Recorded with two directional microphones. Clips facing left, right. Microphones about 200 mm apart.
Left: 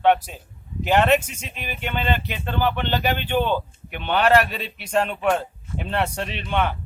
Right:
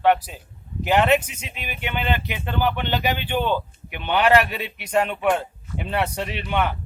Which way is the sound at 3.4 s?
10° left (ahead or behind).